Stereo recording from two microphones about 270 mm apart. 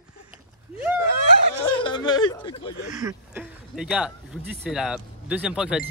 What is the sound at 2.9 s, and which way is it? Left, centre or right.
Speech, centre.